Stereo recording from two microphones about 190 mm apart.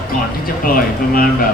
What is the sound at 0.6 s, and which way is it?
Speech, 50° left (ahead or behind).